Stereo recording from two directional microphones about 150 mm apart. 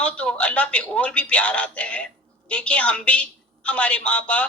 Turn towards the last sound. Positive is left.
turn(degrees=10)  # may be behind; listen again after turning